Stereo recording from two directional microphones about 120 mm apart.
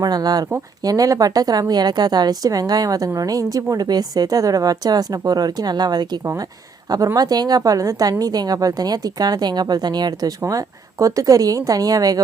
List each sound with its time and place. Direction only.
0.0 s a woman's voice: 35° right (ahead or behind)